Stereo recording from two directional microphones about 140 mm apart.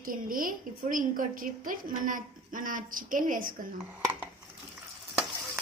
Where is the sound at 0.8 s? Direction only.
70° right (ahead or behind).